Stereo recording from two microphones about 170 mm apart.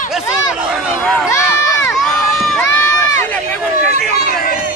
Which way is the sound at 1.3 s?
15° left (ahead or behind).